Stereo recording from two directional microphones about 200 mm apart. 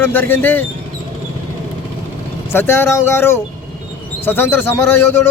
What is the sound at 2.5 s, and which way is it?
Speech, 10° left (ahead or behind).